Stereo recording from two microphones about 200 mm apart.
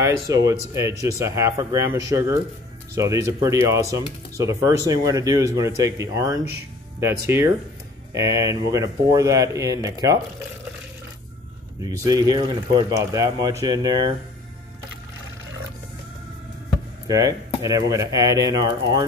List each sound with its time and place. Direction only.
0.0 s speech: 15° right (ahead or behind)
11.8 s speech: 20° right (ahead or behind)
17.1 s speech: 15° right (ahead or behind)